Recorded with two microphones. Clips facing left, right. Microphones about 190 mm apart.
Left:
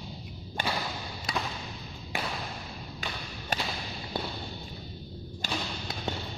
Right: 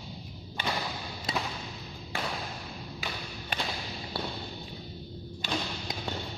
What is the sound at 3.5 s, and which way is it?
Whip, 40° left (ahead or behind).